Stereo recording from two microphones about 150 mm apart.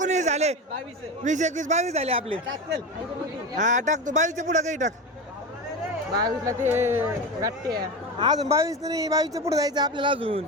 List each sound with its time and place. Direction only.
0.0 s a sound: 50° right (ahead or behind)
1.2 s speech: 55° right (ahead or behind)
3.6 s speech: 55° right (ahead or behind)
6.1 s speech: 25° right (ahead or behind)
7.7 s speech: 25° right (ahead or behind)